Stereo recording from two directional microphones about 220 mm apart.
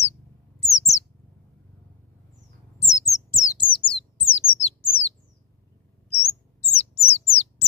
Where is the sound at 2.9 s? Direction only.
15° left (ahead or behind).